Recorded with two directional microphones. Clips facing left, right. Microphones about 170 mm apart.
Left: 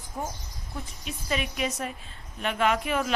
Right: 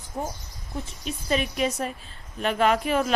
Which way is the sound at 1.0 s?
35° right (ahead or behind).